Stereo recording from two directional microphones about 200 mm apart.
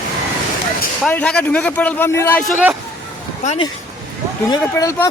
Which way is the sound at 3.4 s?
35° left (ahead or behind).